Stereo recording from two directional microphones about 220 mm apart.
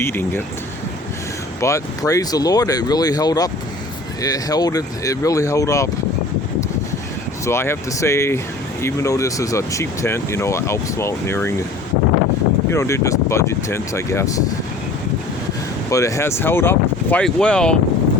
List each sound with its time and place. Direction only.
0.0 s speech: 10° left (ahead or behind)
1.6 s speech: 15° left (ahead or behind)
7.4 s speech: 10° left (ahead or behind)
12.7 s speech: 10° left (ahead or behind)
15.9 s speech: 15° left (ahead or behind)